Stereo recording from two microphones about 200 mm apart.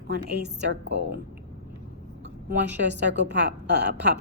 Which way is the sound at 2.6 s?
60° right (ahead or behind).